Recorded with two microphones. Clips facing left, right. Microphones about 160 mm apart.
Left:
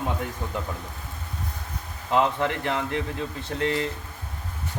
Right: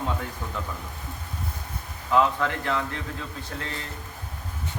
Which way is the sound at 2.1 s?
20° left (ahead or behind).